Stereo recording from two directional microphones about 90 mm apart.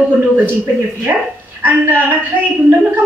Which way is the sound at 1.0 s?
20° right (ahead or behind).